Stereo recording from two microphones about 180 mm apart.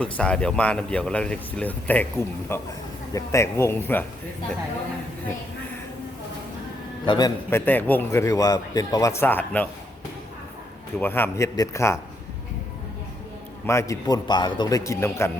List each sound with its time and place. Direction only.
0.0 s speech: 5° left (ahead or behind)
7.0 s a man's voice: 25° left (ahead or behind)
7.6 s speech: 10° left (ahead or behind)
11.0 s speech: 10° left (ahead or behind)
13.7 s speech: 15° left (ahead or behind)